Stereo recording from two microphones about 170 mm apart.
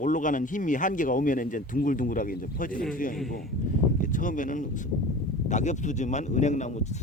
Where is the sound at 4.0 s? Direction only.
50° left (ahead or behind).